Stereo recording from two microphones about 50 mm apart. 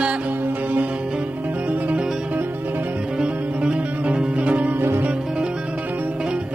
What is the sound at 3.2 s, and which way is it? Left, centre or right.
Music, centre.